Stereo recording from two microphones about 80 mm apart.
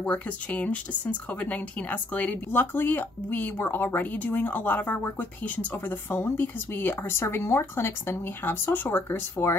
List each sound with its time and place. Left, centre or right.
0.1 s speech: centre